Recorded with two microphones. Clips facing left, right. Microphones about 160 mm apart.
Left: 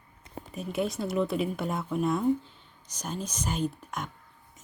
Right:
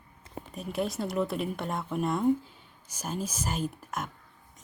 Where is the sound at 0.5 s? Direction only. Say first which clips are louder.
Left 1 dB; centre (ahead or behind).